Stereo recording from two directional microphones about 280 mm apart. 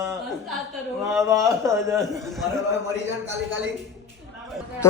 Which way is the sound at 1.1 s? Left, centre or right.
Centre.